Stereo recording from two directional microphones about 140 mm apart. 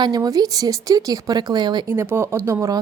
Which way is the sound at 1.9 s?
20° right (ahead or behind).